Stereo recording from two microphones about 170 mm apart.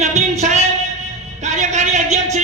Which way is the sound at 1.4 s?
45° right (ahead or behind).